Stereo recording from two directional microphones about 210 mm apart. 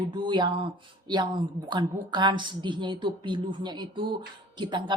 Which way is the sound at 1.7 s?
20° right (ahead or behind).